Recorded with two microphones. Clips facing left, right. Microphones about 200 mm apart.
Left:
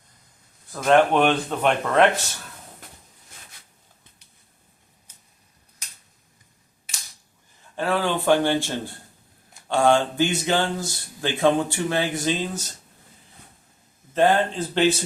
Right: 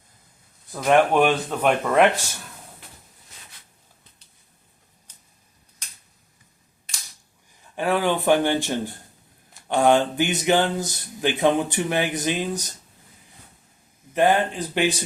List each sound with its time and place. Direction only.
0.7 s speech: 10° right (ahead or behind)
7.8 s speech: 15° right (ahead or behind)
14.1 s speech: 15° right (ahead or behind)